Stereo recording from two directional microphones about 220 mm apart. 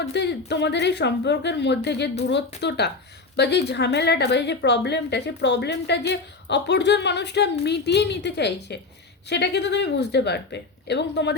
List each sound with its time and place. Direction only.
0.1 s a woman's voice: 50° left (ahead or behind)